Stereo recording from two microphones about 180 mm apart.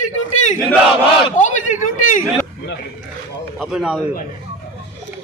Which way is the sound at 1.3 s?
45° left (ahead or behind).